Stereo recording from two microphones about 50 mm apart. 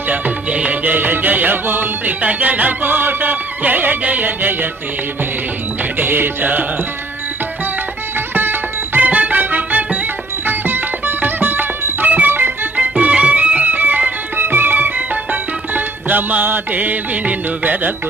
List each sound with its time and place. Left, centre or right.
0.1 s music: right
6.0 s music: right
8.4 s music: right
9.0 s music: right
12.7 s music: right